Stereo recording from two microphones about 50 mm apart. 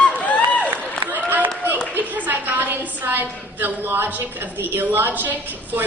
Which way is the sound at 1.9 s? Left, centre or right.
Right.